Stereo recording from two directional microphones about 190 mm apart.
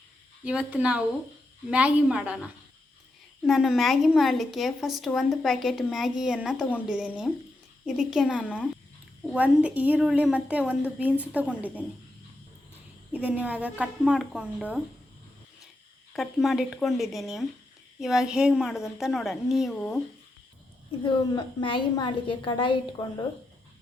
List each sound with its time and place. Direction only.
0.4 s a woman's voice: 5° right (ahead or behind)
13.1 s a woman's voice: 5° right (ahead or behind)
16.1 s a woman's voice: centre (ahead or behind)
21.0 s a woman's voice: 25° left (ahead or behind)